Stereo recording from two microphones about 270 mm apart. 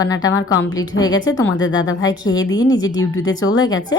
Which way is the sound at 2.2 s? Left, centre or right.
Centre.